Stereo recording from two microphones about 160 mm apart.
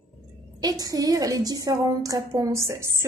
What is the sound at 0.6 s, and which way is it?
A woman's voice, 25° right (ahead or behind).